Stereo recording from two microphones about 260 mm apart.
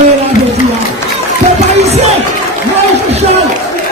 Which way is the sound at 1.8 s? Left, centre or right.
Right.